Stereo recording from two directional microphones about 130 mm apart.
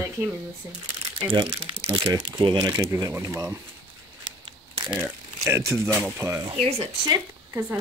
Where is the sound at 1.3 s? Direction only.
40° right (ahead or behind).